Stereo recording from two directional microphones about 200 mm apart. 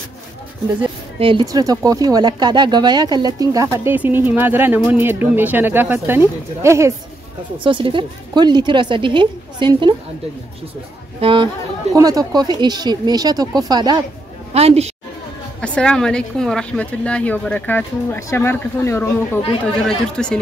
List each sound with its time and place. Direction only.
1.2 s speech: 20° right (ahead or behind)
7.5 s a woman's voice: 25° right (ahead or behind)
11.1 s a woman's voice: 25° right (ahead or behind)
14.5 s a woman's voice: 30° right (ahead or behind)
15.6 s a woman's voice: 5° left (ahead or behind)
20.2 s speech: 5° left (ahead or behind)